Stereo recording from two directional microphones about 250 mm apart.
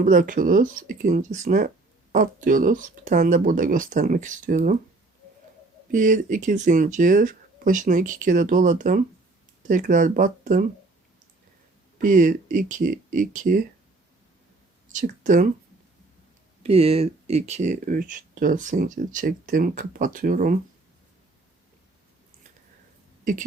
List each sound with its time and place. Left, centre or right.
0.0 s speech: right
5.9 s speech: right
12.0 s speech: right
14.9 s speech: right
16.6 s speech: right